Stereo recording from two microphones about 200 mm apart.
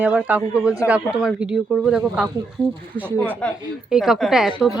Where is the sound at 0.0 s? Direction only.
10° right (ahead or behind).